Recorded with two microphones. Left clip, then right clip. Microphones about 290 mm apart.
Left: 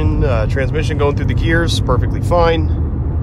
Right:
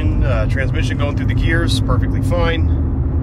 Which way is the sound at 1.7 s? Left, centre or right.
Left.